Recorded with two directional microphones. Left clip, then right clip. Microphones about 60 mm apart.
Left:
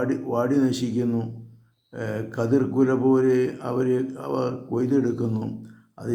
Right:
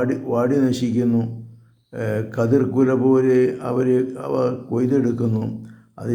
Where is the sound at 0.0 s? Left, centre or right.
Centre.